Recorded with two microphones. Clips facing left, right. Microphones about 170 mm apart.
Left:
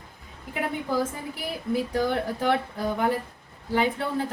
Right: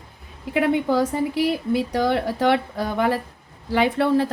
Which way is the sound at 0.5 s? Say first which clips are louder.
Right 8 dB; 85° right.